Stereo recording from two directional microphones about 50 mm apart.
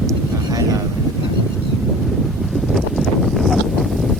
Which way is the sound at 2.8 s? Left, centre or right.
Centre.